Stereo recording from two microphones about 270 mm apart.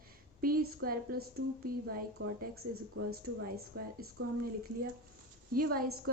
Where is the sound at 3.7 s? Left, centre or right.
Right.